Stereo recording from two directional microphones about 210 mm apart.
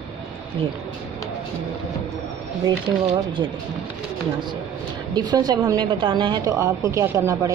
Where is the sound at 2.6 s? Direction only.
25° right (ahead or behind).